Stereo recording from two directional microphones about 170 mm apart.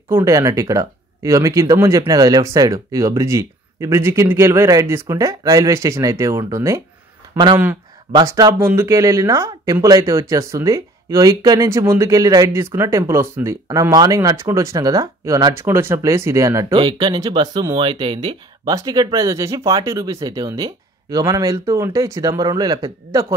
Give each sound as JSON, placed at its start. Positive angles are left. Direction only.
{"t": 0.1, "sound": "speech", "side_deg": -20}
{"t": 8.1, "sound": "speech", "side_deg": -25}